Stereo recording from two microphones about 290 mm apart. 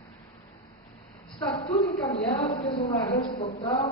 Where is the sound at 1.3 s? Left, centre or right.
Centre.